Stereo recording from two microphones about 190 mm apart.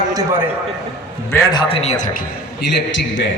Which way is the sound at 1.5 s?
30° left (ahead or behind).